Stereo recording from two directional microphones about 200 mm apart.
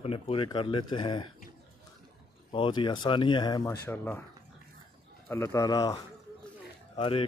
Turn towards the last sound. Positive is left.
turn(degrees=25)  # may be behind; listen again after turning